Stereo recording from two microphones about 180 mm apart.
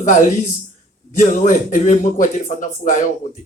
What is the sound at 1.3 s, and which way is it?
A man's voice, 45° left (ahead or behind).